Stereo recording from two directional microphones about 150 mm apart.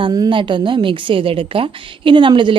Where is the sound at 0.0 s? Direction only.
30° right (ahead or behind).